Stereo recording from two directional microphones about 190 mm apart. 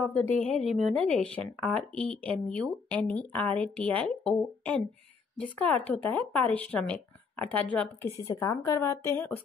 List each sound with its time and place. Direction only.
0.4 s speech: 5° left (ahead or behind)